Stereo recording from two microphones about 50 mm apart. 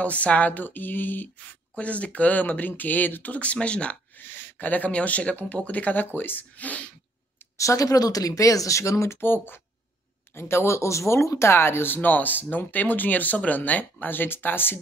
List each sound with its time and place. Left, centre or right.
0.0 s speech: left
1.5 s speech: left
4.2 s speech: left
7.5 s speech: left
9.2 s speech: left
10.3 s speech: left
11.5 s speech: left